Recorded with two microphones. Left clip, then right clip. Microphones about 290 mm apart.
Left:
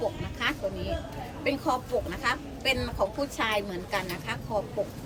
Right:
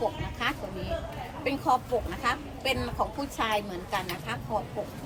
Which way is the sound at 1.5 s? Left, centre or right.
Centre.